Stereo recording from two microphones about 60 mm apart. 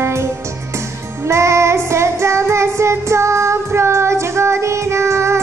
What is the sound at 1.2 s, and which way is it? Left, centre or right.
Child singing, right.